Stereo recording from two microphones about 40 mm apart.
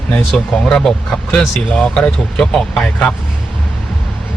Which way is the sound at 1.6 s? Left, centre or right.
Left.